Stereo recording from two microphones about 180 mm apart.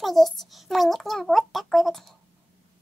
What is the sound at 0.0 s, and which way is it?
A child's voice, centre (ahead or behind).